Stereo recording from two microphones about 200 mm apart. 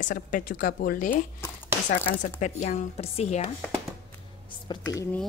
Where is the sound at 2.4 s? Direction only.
35° left (ahead or behind).